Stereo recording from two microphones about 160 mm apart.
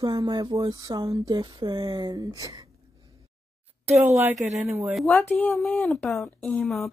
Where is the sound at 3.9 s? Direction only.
45° right (ahead or behind).